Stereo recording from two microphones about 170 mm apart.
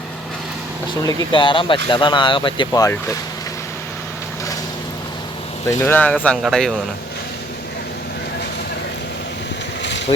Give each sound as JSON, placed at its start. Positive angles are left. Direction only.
{"t": 1.0, "sound": "speech", "side_deg": 30}
{"t": 5.6, "sound": "speech", "side_deg": 15}